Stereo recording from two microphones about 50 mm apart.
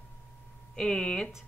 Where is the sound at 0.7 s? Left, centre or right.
Centre.